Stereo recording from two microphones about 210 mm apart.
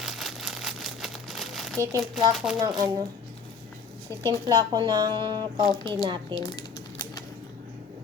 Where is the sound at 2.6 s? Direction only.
15° right (ahead or behind).